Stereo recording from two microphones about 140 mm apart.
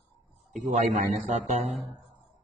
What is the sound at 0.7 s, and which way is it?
Speech, 55° right (ahead or behind).